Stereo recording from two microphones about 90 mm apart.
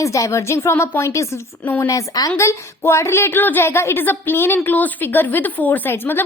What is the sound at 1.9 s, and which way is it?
Speech, 40° left (ahead or behind).